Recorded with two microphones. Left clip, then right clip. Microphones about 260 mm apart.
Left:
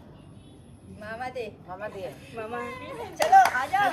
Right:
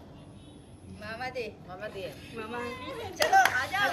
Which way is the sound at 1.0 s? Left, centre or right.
Centre.